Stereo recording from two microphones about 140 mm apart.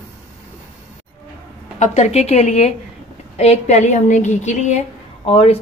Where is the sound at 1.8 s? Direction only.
55° left (ahead or behind).